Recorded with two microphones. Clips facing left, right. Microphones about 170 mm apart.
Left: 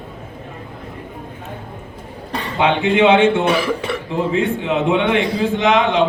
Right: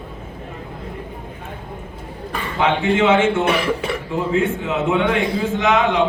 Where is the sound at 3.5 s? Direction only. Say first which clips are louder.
Left 1 dB; centre (ahead or behind).